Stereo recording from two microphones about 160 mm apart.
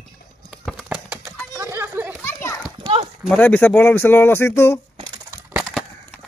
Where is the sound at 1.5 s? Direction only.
15° right (ahead or behind).